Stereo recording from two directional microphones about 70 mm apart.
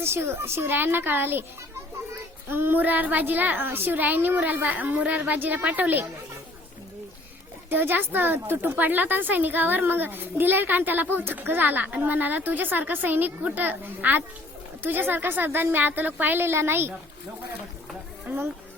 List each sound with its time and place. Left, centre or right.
0.0 s a woman's voice: right
2.5 s speech: right
7.7 s speech: right
18.3 s a woman's voice: right